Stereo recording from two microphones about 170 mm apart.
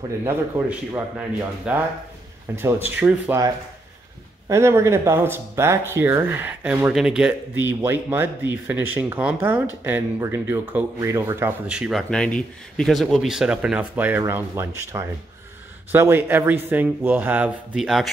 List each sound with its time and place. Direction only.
0.2 s speech: 10° right (ahead or behind)